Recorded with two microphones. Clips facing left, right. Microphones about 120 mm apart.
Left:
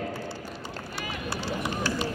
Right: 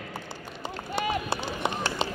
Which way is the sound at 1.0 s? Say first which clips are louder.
Right 6 dB; 20° right (ahead or behind).